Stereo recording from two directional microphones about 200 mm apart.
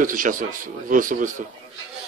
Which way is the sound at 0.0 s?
40° right (ahead or behind).